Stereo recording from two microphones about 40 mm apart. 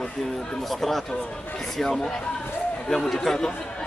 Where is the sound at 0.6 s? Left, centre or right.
Centre.